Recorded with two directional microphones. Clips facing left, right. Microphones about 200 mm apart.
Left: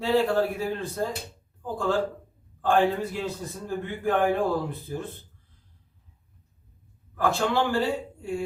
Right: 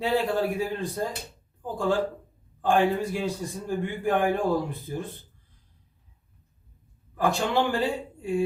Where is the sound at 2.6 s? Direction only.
15° right (ahead or behind).